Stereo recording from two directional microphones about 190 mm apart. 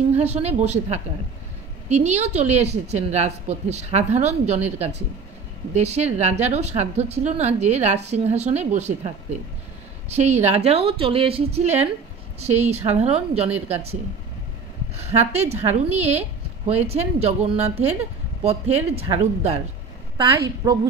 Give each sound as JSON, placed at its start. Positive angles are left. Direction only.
{"t": 0.1, "sound": "a woman's voice", "side_deg": -35}
{"t": 15.0, "sound": "a woman's voice", "side_deg": -35}
{"t": 20.2, "sound": "a woman's voice", "side_deg": -20}